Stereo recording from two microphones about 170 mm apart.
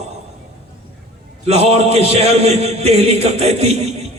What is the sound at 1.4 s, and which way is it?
A man's voice, 40° right (ahead or behind).